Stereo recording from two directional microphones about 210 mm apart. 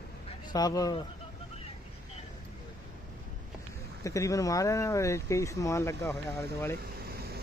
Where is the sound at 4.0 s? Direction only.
15° left (ahead or behind).